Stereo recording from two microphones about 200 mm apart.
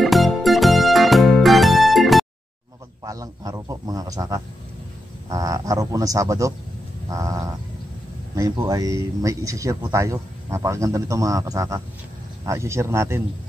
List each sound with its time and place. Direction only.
0.0 s music: centre (ahead or behind)
3.0 s speech: 20° right (ahead or behind)